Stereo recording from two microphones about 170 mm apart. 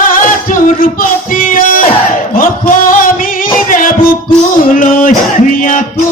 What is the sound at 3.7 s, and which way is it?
Music, 50° left (ahead or behind).